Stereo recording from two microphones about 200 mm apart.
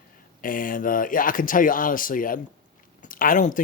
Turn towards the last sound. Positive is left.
turn(degrees=40)  # may be behind; listen again after turning